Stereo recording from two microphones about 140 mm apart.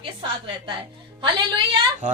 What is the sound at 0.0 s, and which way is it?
A woman's voice, 35° right (ahead or behind).